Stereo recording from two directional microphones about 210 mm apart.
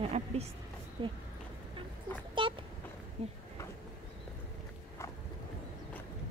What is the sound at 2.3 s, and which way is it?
Vehicle, 25° right (ahead or behind).